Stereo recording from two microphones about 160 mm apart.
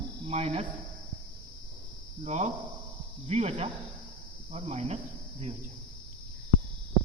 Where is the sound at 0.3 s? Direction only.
40° right (ahead or behind).